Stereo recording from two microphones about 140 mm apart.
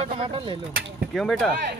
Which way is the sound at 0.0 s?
40° right (ahead or behind).